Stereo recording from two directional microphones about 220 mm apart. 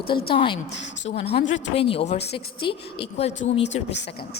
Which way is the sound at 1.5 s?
25° left (ahead or behind).